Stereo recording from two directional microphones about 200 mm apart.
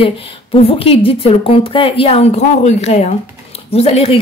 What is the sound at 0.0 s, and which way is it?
A woman's voice, 30° left (ahead or behind).